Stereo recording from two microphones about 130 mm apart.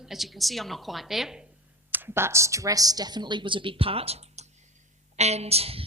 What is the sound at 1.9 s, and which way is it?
A woman's voice, 15° right (ahead or behind).